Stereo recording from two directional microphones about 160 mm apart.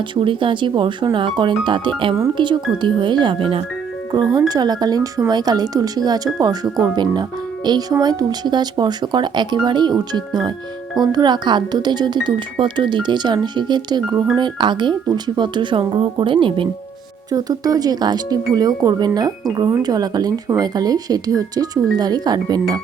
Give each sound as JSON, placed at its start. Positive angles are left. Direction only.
{"t": 0.2, "sound": "speech", "side_deg": -30}